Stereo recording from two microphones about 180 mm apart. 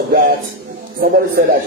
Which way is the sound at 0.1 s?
50° right (ahead or behind).